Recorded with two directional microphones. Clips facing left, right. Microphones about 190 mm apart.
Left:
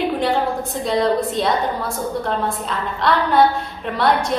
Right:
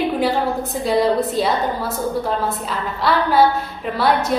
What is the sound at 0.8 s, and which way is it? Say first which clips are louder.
Speech: right 1 dB; 5° right (ahead or behind).